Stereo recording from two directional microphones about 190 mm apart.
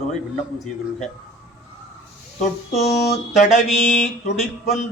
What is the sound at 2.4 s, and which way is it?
Speech, 35° left (ahead or behind).